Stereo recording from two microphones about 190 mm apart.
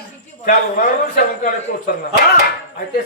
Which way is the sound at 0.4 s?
45° left (ahead or behind).